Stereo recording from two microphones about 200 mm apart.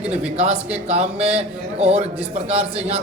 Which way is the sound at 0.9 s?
30° right (ahead or behind).